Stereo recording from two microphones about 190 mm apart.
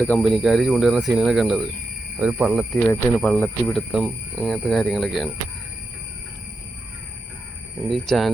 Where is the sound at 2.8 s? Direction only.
10° left (ahead or behind).